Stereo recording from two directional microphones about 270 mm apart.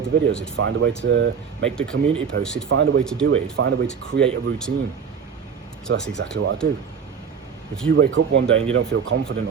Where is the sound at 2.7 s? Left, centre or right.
Right.